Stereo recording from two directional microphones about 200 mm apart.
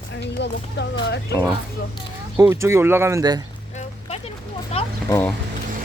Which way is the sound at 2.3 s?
15° right (ahead or behind).